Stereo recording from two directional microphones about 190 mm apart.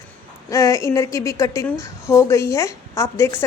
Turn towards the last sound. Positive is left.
turn(degrees=15)  # may be behind; listen again after turning